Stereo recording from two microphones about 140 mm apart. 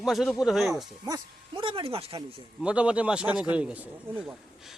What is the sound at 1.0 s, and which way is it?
Speech, 30° right (ahead or behind).